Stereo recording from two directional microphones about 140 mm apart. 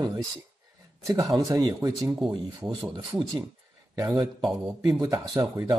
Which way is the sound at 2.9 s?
35° right (ahead or behind).